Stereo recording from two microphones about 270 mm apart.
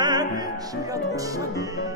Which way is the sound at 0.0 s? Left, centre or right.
Centre.